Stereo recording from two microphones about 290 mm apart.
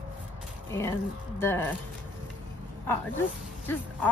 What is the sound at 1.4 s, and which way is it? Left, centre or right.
Speech, centre.